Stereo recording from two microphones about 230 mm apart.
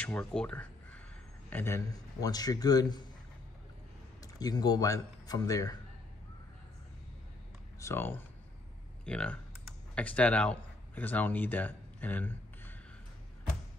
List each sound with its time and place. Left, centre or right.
0.0 s a man's voice: centre
4.2 s a man's voice: centre
7.8 s a man's voice: centre
9.0 s computer keyboard: centre